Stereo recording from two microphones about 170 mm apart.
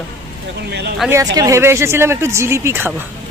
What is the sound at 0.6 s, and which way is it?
Speech, 75° right (ahead or behind).